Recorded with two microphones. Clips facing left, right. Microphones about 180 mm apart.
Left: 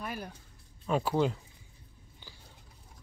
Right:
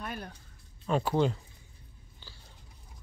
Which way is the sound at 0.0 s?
5° left (ahead or behind).